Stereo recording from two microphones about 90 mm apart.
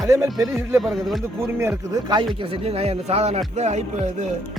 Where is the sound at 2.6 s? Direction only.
90° right.